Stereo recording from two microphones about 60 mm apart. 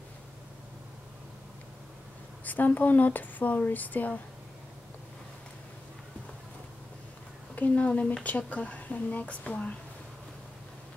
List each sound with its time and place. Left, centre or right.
2.4 s speech: left
7.5 s speech: left